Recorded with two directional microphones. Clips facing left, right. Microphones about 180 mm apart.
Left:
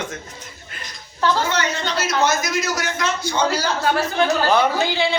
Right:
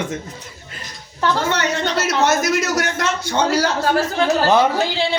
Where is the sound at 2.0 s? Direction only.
70° right (ahead or behind).